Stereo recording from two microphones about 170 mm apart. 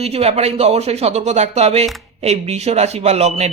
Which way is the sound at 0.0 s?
35° right (ahead or behind).